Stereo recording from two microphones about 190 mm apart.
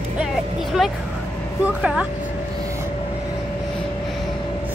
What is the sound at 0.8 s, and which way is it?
A woman's voice, centre (ahead or behind).